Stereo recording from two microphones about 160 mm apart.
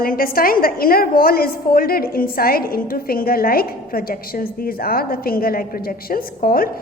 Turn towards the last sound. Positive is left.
turn(degrees=65)  # may be behind; listen again after turning